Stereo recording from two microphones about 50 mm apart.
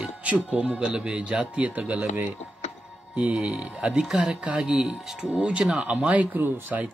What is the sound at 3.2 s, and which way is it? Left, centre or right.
Speech, right.